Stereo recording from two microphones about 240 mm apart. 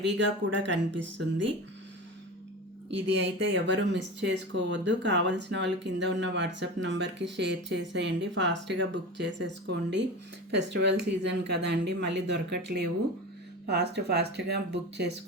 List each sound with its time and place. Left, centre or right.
0.2 s speech: right
2.9 s speech: right